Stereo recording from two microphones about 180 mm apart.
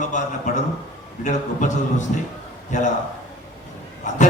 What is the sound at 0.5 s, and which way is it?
A man's voice, 40° left (ahead or behind).